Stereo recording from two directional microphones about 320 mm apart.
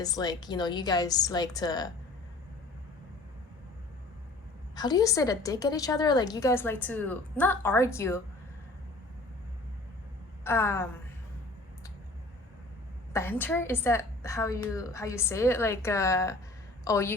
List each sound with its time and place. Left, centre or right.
0.0 s a woman's voice: centre
4.7 s a woman's voice: centre
10.4 s a woman's voice: centre
13.1 s a woman's voice: centre